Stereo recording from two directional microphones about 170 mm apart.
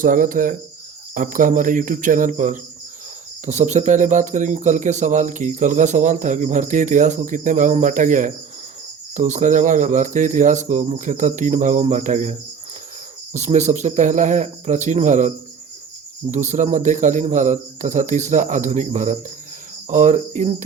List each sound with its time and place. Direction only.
0.0 s speech: 55° right (ahead or behind)
16.3 s speech: 45° right (ahead or behind)